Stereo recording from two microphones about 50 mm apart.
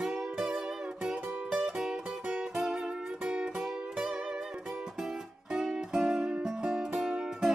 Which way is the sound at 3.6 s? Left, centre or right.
Centre.